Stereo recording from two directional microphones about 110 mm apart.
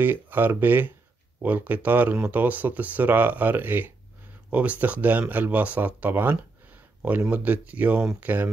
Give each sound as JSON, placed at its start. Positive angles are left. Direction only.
{"t": 0.0, "sound": "speech", "side_deg": -15}